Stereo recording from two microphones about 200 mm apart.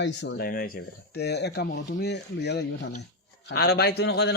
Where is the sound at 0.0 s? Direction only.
60° left (ahead or behind).